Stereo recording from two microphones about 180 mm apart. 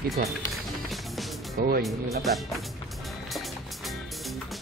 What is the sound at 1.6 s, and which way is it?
Speech, 55° right (ahead or behind).